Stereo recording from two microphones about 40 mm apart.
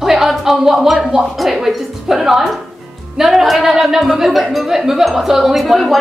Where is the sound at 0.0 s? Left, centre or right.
Centre.